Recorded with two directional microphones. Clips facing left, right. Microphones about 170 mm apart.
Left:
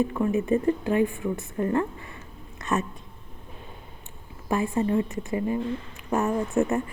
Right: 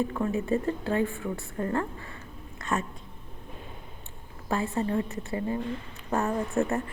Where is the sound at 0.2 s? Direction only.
20° left (ahead or behind).